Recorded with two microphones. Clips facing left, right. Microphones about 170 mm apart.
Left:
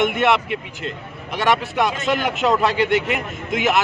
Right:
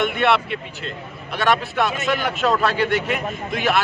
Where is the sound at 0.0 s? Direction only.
15° left (ahead or behind).